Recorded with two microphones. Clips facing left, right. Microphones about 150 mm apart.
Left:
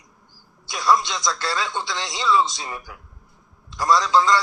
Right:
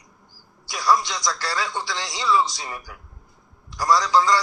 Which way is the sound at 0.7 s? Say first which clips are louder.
Left 1 dB; 20° left (ahead or behind).